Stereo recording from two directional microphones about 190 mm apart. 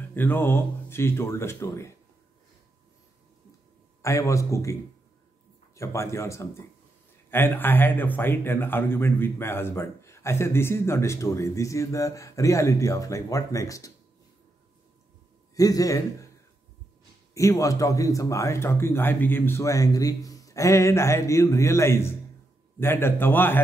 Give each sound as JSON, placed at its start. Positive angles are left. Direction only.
{"t": 0.1, "sound": "speech", "side_deg": 10}
{"t": 4.0, "sound": "speech", "side_deg": 15}
{"t": 5.8, "sound": "speech", "side_deg": 15}
{"t": 15.5, "sound": "a man's voice", "side_deg": 20}
{"t": 17.3, "sound": "speech", "side_deg": 15}